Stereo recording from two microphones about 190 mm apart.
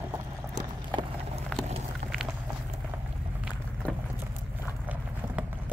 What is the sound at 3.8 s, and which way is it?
Vehicle, 5° left (ahead or behind).